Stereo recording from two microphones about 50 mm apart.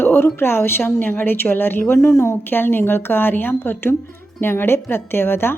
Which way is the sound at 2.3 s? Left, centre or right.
Left.